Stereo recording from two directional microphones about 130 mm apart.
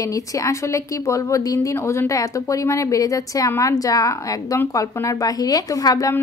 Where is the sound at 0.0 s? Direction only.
25° left (ahead or behind).